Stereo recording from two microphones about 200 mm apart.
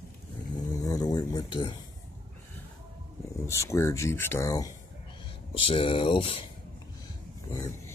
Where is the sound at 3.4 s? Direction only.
15° left (ahead or behind).